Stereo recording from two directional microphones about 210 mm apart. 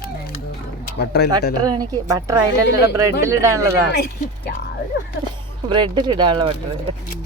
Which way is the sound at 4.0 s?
50° left (ahead or behind).